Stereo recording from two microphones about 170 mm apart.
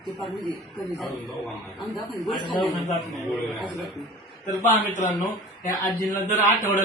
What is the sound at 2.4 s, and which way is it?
Speech, 25° left (ahead or behind).